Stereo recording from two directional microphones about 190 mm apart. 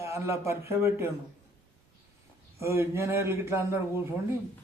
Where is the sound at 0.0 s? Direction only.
15° right (ahead or behind).